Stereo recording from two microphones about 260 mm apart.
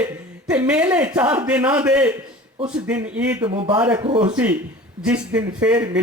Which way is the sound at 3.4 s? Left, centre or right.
Centre.